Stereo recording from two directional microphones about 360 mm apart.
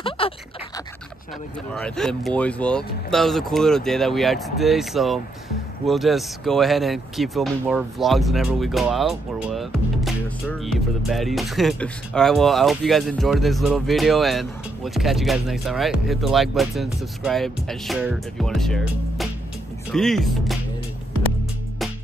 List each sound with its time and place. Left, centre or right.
0.2 s dog: centre
1.7 s speech: centre